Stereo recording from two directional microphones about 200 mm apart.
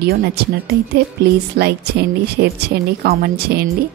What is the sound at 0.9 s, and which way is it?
A woman's voice, 55° right (ahead or behind).